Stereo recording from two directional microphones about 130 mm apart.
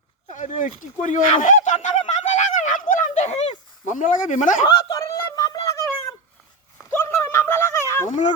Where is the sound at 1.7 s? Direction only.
60° left (ahead or behind).